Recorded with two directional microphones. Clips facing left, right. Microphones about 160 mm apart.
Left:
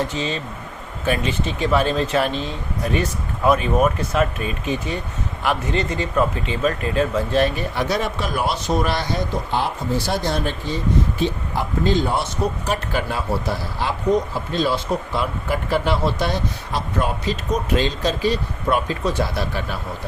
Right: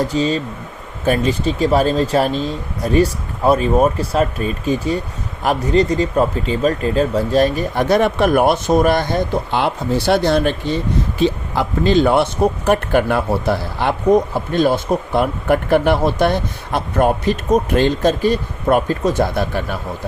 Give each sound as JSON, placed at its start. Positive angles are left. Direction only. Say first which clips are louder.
{"t": 0.0, "sound": "speech", "louder": "right 7 dB", "side_deg": -35}
{"t": 11.2, "sound": "speech", "louder": "right 5 dB", "side_deg": -85}